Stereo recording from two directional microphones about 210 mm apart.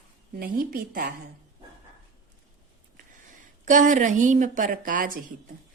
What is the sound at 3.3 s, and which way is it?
A woman's voice, 40° right (ahead or behind).